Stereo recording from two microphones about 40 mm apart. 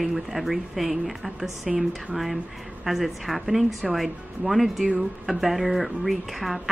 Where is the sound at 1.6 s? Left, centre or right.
Centre.